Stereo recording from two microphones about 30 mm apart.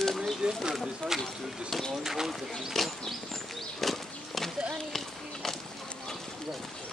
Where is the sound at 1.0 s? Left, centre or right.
Left.